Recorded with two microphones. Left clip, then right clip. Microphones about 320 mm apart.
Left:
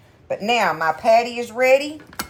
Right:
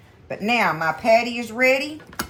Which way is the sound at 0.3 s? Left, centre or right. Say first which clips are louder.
Left 2 dB; centre.